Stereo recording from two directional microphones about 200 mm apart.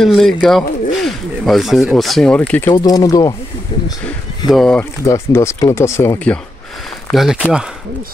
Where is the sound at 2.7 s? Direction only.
20° left (ahead or behind).